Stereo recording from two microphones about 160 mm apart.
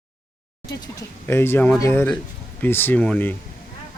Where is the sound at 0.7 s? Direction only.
20° left (ahead or behind).